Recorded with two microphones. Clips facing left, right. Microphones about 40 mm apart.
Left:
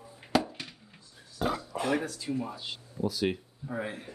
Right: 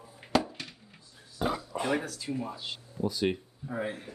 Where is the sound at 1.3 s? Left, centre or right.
Centre.